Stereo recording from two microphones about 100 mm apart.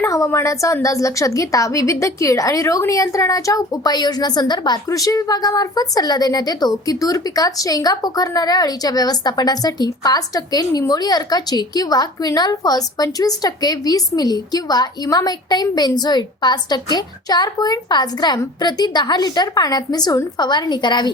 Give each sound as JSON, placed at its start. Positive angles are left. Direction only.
{"t": 0.0, "sound": "speech", "side_deg": 30}